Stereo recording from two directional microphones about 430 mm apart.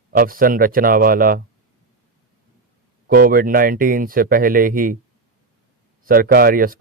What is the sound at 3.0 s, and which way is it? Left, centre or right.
Speech, centre.